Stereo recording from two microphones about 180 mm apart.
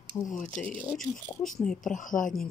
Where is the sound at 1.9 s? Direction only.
45° left (ahead or behind).